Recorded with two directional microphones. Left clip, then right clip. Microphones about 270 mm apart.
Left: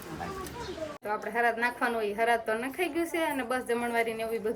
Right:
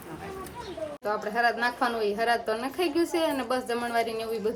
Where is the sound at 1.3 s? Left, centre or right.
Centre.